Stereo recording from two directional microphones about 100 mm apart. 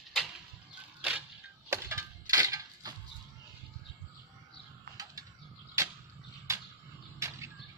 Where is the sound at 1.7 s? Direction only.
30° right (ahead or behind).